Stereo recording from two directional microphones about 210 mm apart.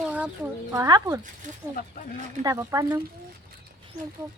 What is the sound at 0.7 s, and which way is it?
Speech, 15° right (ahead or behind).